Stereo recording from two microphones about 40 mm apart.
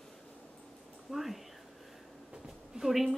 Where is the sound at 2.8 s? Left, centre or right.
Centre.